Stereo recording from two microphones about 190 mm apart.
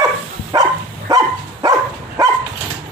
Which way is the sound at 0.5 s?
20° right (ahead or behind).